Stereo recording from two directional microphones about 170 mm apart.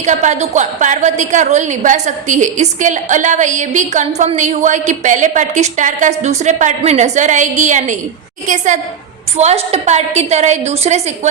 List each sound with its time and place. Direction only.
0.0 s a woman's voice: 45° right (ahead or behind)